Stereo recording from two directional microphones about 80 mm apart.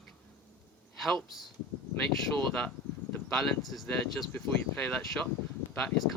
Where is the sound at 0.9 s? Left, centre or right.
Centre.